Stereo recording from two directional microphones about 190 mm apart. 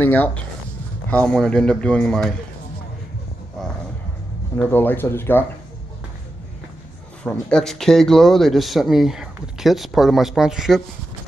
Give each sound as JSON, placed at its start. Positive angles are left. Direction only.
{"t": 0.0, "sound": "speech", "side_deg": 10}
{"t": 4.6, "sound": "speech", "side_deg": 10}
{"t": 7.2, "sound": "speech", "side_deg": 5}